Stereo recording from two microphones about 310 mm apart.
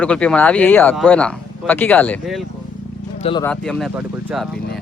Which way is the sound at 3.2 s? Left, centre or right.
Centre.